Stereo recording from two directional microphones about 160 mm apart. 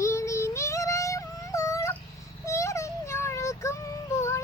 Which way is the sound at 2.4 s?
20° left (ahead or behind).